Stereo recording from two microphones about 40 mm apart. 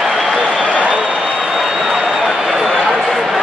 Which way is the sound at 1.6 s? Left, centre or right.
Centre.